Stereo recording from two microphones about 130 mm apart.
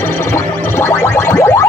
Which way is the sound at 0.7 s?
20° left (ahead or behind).